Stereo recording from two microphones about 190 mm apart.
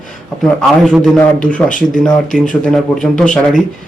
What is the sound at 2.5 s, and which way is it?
Speech, 5° left (ahead or behind).